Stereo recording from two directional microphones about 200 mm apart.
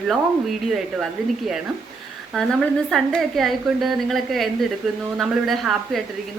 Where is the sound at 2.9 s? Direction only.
Centre (ahead or behind).